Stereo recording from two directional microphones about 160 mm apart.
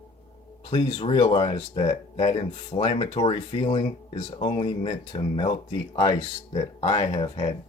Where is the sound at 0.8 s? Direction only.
30° left (ahead or behind).